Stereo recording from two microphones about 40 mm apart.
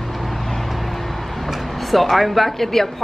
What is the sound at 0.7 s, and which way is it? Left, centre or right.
A man's voice, centre.